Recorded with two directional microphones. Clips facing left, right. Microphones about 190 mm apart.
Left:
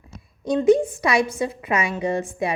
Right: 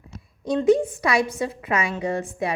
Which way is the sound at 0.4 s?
15° left (ahead or behind).